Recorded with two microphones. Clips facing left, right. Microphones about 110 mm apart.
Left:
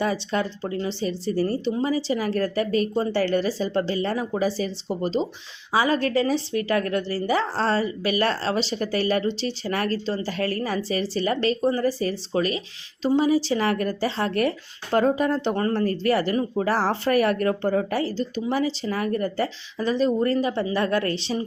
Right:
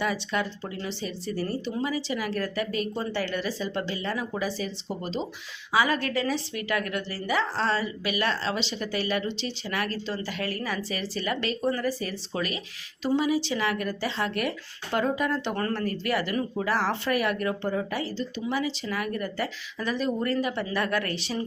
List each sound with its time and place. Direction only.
0.0 s a woman's voice: 35° left (ahead or behind)